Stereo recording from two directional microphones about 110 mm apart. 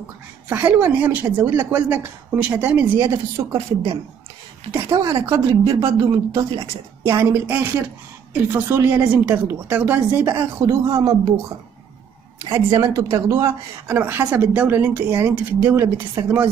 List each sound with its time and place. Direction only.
0.5 s speech: 15° right (ahead or behind)
1.2 s speech: 30° right (ahead or behind)
1.7 s speech: 15° right (ahead or behind)
3.1 s speech: 25° right (ahead or behind)
4.9 s speech: 30° right (ahead or behind)
10.6 s speech: 35° right (ahead or behind)
12.4 s speech: 55° right (ahead or behind)
12.7 s speech: 30° right (ahead or behind)